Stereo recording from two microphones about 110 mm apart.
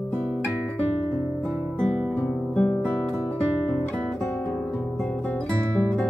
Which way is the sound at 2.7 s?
15° left (ahead or behind).